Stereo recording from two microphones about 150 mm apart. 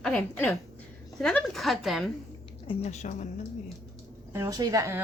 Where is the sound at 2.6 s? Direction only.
40° left (ahead or behind).